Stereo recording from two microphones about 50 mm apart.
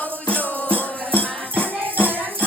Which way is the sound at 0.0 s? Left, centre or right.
Left.